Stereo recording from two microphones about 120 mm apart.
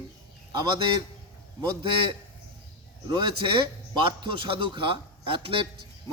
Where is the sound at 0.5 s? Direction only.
35° right (ahead or behind).